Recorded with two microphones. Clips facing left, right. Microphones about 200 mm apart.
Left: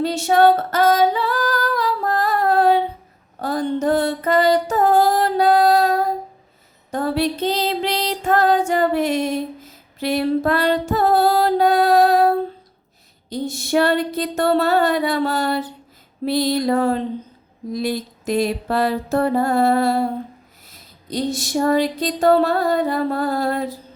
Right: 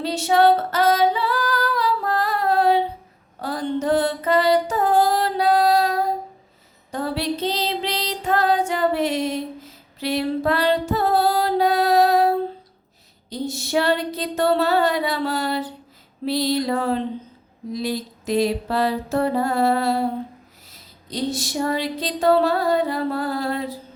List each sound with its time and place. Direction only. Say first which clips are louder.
0.0 s female singing: left 2 dB; 50° left (ahead or behind)
3.4 s music: left 3 dB; 45° left (ahead or behind)
6.9 s female singing: left 4 dB; 50° left (ahead or behind)
10.0 s music: left 3 dB; 50° left (ahead or behind)
13.3 s female singing: left 2 dB; 50° left (ahead or behind)
13.7 s a sound: left 3 dB; 50° left (ahead or behind)
21.1 s a sound: left 3 dB; 45° left (ahead or behind)